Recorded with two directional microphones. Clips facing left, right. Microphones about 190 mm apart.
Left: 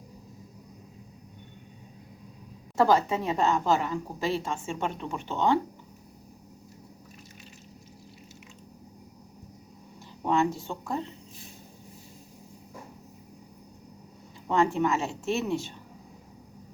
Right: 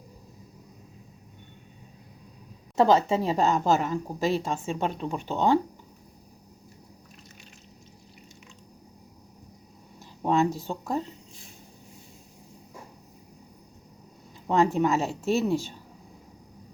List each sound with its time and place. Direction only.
2.7 s a woman's voice: 25° right (ahead or behind)
3.2 s a woman's voice: 35° right (ahead or behind)
10.2 s a woman's voice: 35° right (ahead or behind)
14.5 s a woman's voice: 35° right (ahead or behind)